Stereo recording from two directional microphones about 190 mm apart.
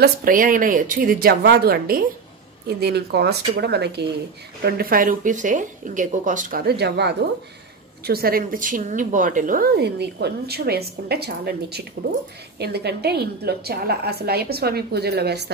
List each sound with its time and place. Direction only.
0.0 s a woman's voice: 45° right (ahead or behind)